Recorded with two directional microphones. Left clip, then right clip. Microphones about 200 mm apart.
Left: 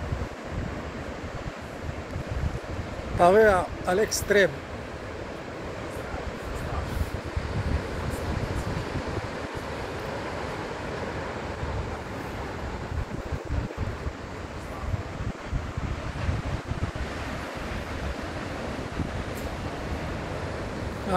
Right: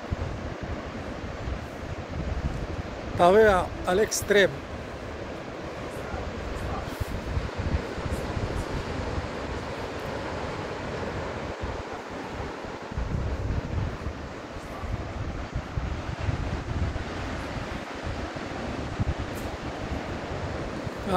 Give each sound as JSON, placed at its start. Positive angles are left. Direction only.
{"t": 3.2, "sound": "speech", "side_deg": 5}